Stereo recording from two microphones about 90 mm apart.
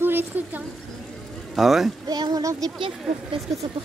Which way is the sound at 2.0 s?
45° right (ahead or behind).